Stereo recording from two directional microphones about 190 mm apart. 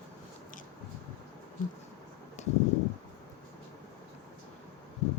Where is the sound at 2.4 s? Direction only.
35° left (ahead or behind).